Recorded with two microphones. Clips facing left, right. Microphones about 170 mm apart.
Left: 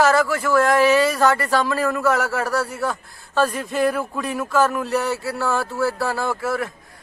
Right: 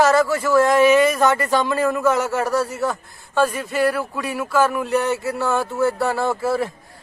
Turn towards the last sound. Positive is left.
turn(degrees=-25)  # may be behind; listen again after turning